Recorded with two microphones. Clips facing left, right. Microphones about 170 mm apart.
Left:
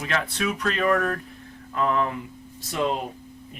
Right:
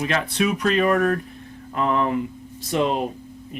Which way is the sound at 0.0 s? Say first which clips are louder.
Right 4 dB; 20° right (ahead or behind).